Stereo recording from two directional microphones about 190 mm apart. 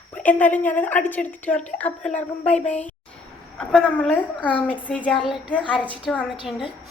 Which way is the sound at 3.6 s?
5° left (ahead or behind).